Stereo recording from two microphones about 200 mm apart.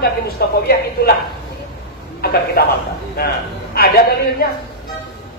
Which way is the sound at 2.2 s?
50° left (ahead or behind).